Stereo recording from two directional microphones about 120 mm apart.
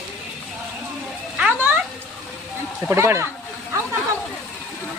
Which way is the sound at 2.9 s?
20° right (ahead or behind).